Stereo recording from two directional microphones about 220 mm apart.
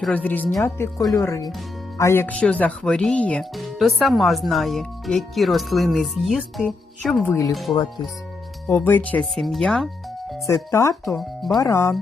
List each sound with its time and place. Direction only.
0.0 s speech: 5° left (ahead or behind)
8.7 s speech: 10° left (ahead or behind)
10.4 s speech: 15° left (ahead or behind)
11.2 s speech: centre (ahead or behind)
11.6 s speech: 15° left (ahead or behind)